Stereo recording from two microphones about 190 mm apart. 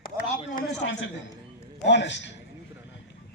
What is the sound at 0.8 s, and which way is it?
Speech, 90° left.